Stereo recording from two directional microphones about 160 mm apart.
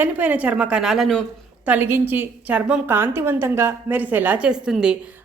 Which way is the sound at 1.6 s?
10° right (ahead or behind).